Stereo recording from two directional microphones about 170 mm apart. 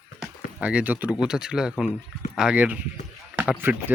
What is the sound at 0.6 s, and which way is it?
Speech, 5° right (ahead or behind).